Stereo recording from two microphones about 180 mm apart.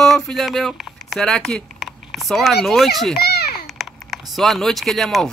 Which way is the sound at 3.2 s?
60° left (ahead or behind).